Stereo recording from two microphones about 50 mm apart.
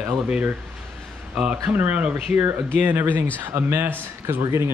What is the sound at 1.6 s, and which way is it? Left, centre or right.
Speech, right.